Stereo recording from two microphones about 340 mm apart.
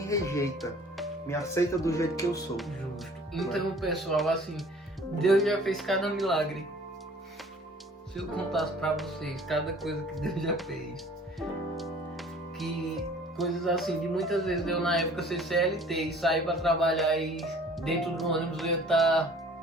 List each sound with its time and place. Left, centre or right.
0.0 s speech: centre
8.1 s speech: centre
13.3 s speech: centre